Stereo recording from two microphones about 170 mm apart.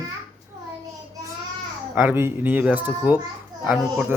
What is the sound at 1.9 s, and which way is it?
A child's voice, 10° right (ahead or behind).